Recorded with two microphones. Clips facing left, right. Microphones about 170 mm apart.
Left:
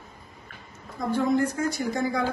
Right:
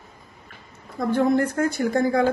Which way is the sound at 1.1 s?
60° right (ahead or behind).